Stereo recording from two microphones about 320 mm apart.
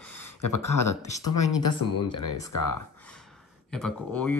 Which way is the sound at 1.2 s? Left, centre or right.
Left.